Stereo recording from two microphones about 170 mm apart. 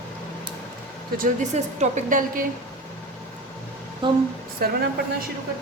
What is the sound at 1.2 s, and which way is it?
A woman's voice, 45° right (ahead or behind).